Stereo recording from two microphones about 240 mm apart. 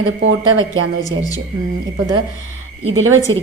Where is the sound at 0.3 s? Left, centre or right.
Right.